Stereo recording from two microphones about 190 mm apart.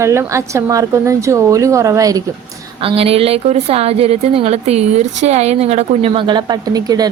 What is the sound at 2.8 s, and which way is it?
A woman's voice, 30° right (ahead or behind).